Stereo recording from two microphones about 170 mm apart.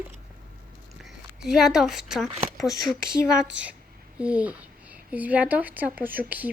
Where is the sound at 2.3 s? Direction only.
40° right (ahead or behind).